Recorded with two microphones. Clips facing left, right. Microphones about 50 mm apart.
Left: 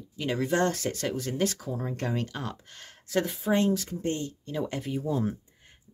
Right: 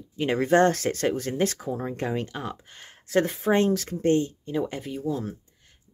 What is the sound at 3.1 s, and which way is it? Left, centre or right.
Speech, right.